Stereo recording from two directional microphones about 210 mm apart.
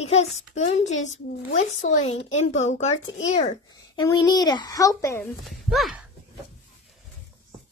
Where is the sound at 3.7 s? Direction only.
20° left (ahead or behind).